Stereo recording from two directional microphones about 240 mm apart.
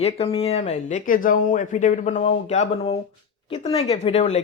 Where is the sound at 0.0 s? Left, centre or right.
Left.